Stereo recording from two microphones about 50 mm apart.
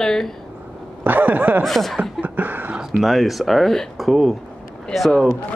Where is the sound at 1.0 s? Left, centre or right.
Right.